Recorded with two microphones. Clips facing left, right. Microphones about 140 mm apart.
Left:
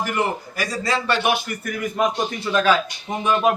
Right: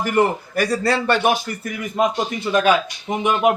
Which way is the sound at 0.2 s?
55° right (ahead or behind).